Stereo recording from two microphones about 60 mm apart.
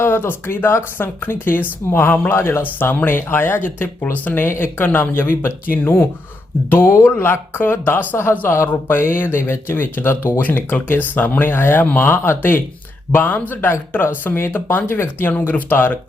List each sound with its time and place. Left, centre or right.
0.0 s speech: left
2.7 s speech: left
4.0 s speech: left
10.4 s speech: left
15.3 s speech: left